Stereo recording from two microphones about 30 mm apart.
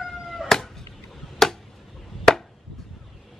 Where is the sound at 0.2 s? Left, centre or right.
Centre.